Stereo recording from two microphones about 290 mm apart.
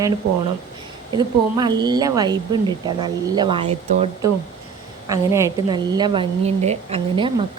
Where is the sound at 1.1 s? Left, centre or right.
Centre.